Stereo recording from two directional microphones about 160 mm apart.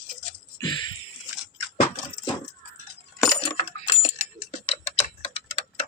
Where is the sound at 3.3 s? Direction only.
35° left (ahead or behind).